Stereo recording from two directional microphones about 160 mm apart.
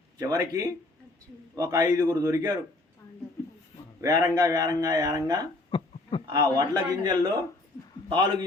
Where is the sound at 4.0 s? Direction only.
20° right (ahead or behind).